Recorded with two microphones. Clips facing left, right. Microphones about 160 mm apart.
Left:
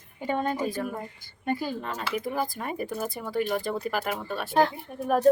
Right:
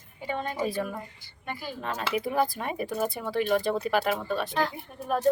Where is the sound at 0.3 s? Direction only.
45° left (ahead or behind).